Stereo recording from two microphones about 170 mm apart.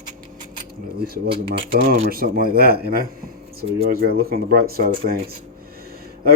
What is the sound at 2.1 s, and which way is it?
A man's voice, 60° right (ahead or behind).